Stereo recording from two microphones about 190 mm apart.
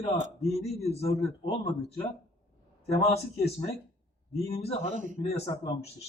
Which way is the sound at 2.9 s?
30° left (ahead or behind).